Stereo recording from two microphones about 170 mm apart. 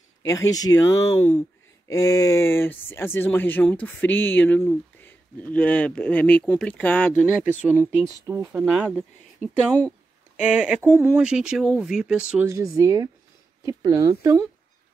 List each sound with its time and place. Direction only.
0.2 s speech: 20° left (ahead or behind)
7.9 s speech: 20° right (ahead or behind)
12.4 s speech: 20° right (ahead or behind)